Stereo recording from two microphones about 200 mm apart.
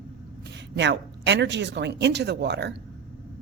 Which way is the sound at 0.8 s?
60° right (ahead or behind).